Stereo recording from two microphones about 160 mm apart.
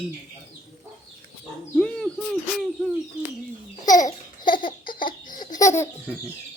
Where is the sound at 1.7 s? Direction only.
5° left (ahead or behind).